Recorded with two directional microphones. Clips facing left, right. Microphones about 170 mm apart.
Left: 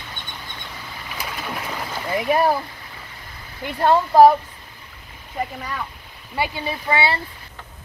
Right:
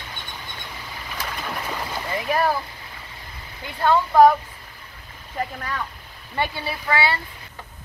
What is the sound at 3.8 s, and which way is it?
Speech, 30° left (ahead or behind).